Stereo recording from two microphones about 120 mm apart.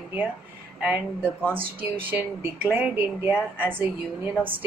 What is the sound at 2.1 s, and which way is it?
Speech, 15° right (ahead or behind).